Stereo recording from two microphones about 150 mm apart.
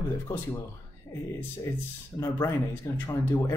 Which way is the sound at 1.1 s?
25° left (ahead or behind).